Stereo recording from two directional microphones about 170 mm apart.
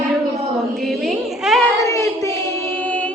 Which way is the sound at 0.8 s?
Centre (ahead or behind).